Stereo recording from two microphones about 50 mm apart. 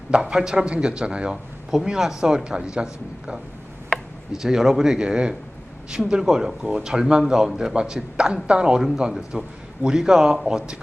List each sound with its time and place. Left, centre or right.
0.1 s speech: centre
1.7 s speech: centre